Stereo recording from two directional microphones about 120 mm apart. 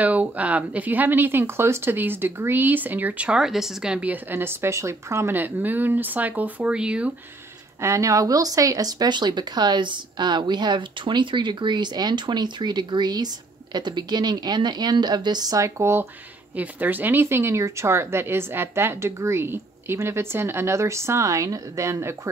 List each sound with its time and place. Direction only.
0.0 s speech: 15° right (ahead or behind)
7.8 s speech: 25° right (ahead or behind)